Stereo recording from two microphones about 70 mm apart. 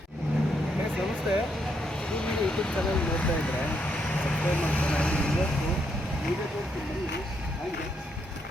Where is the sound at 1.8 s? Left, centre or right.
Centre.